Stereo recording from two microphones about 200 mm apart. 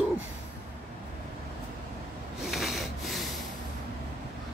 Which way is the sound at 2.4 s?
Centre (ahead or behind).